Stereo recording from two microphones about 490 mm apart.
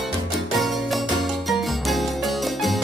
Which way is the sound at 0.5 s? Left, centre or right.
Centre.